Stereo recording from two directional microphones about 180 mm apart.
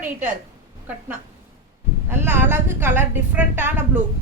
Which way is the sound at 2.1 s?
10° right (ahead or behind).